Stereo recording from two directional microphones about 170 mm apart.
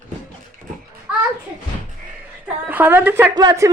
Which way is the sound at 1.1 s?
5° right (ahead or behind).